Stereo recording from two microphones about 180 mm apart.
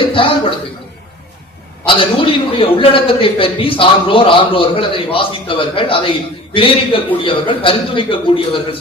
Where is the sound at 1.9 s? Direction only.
30° left (ahead or behind).